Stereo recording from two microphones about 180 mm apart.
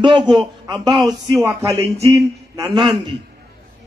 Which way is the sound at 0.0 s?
25° right (ahead or behind).